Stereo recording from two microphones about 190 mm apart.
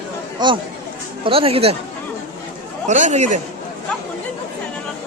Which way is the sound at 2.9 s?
40° right (ahead or behind).